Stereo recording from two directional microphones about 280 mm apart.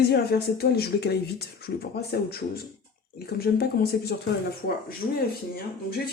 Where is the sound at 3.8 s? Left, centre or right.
Left.